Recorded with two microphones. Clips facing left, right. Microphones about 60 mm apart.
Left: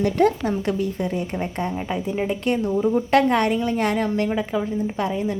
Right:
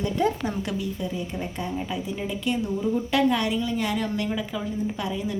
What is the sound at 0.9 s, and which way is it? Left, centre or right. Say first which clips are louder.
A woman's voice: left 5 dB; left.